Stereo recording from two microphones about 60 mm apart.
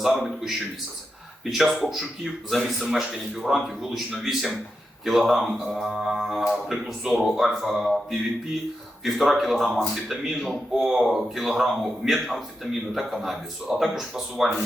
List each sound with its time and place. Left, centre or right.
0.0 s speech: centre
9.0 s speech: centre